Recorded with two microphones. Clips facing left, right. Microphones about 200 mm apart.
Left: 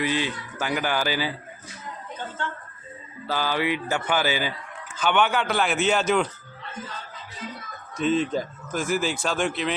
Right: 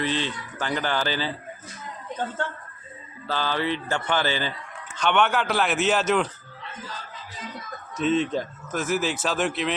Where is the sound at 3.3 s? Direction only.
10° left (ahead or behind).